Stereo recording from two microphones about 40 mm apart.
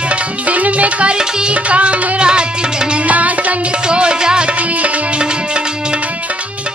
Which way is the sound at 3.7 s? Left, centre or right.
Right.